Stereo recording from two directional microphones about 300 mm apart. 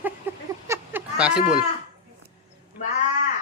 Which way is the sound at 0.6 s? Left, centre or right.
Centre.